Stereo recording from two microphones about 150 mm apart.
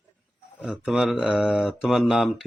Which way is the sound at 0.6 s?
5° right (ahead or behind).